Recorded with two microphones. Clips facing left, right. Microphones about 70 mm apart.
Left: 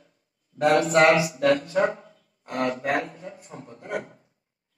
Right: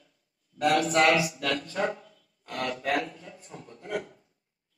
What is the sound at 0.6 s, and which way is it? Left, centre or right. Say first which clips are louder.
Speech: left 4 dB; left.